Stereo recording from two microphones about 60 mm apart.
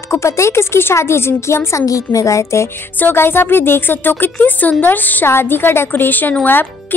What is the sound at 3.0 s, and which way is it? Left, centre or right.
A woman's voice, left.